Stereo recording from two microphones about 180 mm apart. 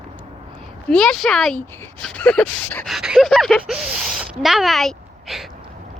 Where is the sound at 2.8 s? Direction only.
Centre (ahead or behind).